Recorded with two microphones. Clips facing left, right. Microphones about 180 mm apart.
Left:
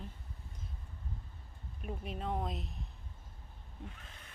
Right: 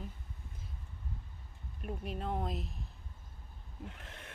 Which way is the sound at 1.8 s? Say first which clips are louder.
Right 1 dB; centre (ahead or behind).